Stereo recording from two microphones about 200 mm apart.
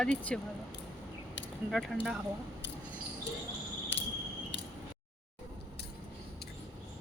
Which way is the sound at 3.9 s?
65° left (ahead or behind).